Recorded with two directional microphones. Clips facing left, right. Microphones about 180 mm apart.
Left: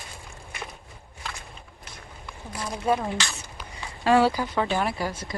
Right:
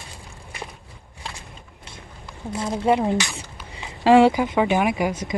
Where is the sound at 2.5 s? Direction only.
25° right (ahead or behind).